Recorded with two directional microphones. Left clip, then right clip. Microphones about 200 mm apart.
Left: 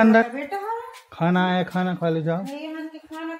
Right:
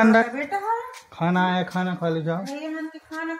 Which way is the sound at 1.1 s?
30° left (ahead or behind).